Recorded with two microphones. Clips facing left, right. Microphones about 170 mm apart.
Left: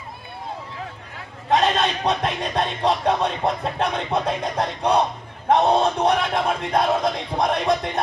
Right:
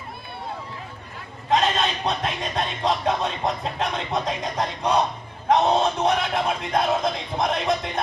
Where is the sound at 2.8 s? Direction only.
65° left (ahead or behind).